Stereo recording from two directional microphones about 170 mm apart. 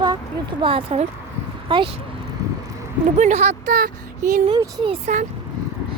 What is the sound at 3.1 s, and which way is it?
Speech, 45° right (ahead or behind).